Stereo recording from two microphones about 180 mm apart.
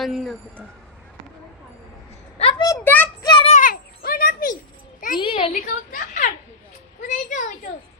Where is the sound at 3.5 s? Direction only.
50° left (ahead or behind).